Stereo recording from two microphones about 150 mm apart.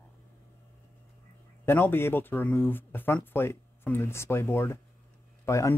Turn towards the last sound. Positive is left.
turn(degrees=20)  # may be behind; listen again after turning